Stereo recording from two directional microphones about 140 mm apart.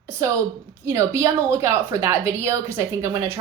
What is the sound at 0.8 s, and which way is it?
A woman's voice, 20° right (ahead or behind).